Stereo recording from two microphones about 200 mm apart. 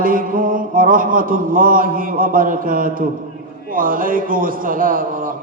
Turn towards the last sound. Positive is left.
turn(degrees=-45)  # may be behind; listen again after turning